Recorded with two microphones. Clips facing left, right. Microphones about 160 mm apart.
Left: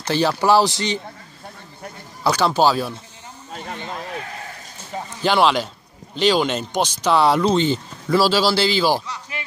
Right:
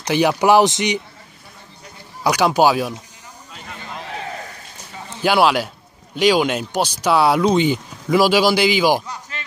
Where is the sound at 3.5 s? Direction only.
40° left (ahead or behind).